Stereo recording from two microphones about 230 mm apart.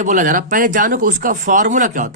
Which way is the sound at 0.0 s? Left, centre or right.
Right.